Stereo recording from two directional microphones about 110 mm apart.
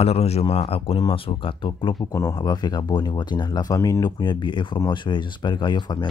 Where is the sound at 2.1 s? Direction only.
25° left (ahead or behind).